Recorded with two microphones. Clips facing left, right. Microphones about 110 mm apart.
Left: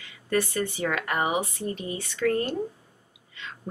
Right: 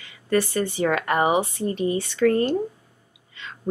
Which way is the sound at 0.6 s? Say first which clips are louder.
Right 5 dB; 35° right (ahead or behind).